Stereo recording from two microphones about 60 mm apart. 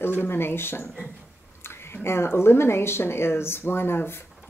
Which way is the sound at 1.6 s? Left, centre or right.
Left.